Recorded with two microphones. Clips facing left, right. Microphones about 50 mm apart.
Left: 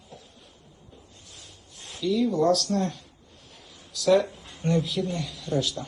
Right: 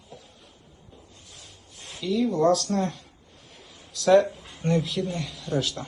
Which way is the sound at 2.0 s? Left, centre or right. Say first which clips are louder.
Even; centre.